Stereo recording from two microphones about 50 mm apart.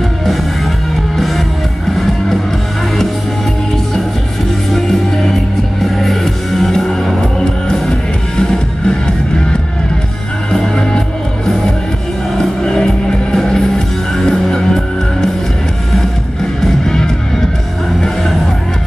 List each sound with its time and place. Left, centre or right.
1.1 s music: centre
4.7 s music: centre
12.4 s music: centre
16.8 s music: centre